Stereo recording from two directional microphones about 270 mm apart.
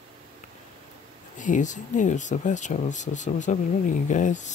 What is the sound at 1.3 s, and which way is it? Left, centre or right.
Speech, left.